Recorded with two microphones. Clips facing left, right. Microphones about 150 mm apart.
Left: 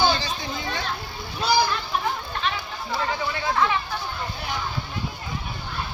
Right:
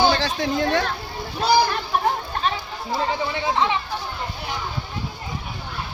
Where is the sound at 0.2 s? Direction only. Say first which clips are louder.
Right 8 dB; 90° right; by 0.9 s 70° right (ahead or behind).